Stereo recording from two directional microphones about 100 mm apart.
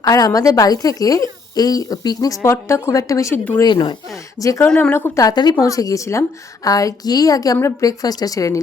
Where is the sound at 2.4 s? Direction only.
25° left (ahead or behind).